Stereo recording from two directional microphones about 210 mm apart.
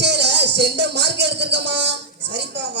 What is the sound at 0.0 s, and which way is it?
Music, 55° right (ahead or behind).